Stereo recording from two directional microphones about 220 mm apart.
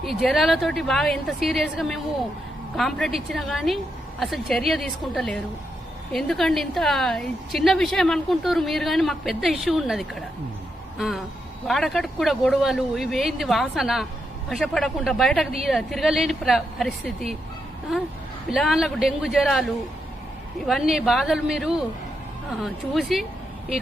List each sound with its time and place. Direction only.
0.0 s a woman's voice: centre (ahead or behind)
10.9 s a sound: centre (ahead or behind)
11.7 s a woman's voice: centre (ahead or behind)
18.5 s a woman's voice: centre (ahead or behind)
20.7 s a woman's voice: centre (ahead or behind)